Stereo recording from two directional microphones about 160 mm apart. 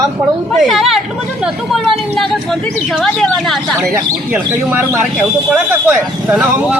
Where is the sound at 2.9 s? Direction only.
Centre (ahead or behind).